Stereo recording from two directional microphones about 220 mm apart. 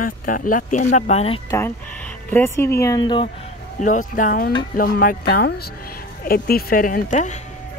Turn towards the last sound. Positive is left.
turn(degrees=35)  # may be behind; listen again after turning